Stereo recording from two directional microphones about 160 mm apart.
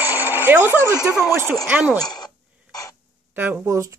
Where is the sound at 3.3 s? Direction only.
10° right (ahead or behind).